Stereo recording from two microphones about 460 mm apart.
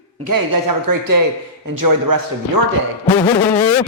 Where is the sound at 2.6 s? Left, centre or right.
Right.